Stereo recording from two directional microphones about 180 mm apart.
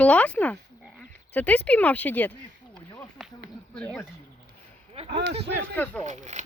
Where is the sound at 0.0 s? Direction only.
10° left (ahead or behind).